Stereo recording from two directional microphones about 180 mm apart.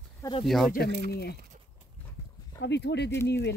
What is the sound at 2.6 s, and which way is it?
Speech, 70° left (ahead or behind).